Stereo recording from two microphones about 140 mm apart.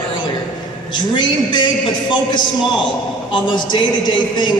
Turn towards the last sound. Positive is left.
turn(degrees=35)  # may be behind; listen again after turning